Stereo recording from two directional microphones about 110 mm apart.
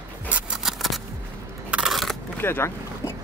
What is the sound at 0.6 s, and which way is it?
Scissors, centre (ahead or behind).